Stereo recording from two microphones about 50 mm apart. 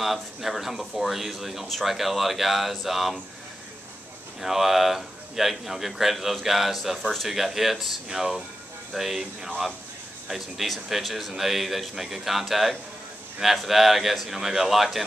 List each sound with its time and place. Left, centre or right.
0.0 s a man's voice: centre
4.4 s a man's voice: centre